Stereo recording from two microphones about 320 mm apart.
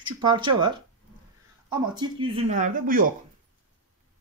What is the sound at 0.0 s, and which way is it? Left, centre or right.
Speech, centre.